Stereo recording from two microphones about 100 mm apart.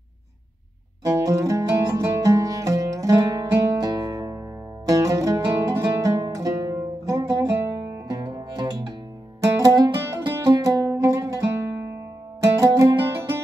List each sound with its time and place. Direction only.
1.0 s music: 30° right (ahead or behind)